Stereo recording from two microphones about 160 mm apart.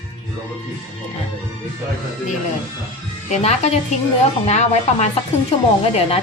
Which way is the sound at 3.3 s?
45° left (ahead or behind).